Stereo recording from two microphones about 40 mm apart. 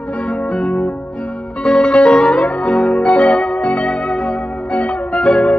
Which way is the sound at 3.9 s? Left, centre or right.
Centre.